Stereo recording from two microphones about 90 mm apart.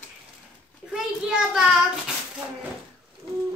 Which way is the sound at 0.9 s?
5° right (ahead or behind).